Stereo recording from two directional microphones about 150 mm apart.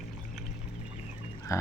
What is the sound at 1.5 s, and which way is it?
Pig, 20° left (ahead or behind).